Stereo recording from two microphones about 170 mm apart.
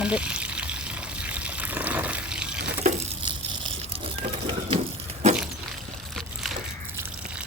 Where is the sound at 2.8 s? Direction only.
45° right (ahead or behind).